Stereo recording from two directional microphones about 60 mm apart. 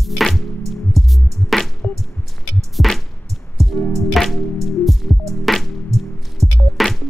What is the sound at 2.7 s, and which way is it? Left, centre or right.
Music, centre.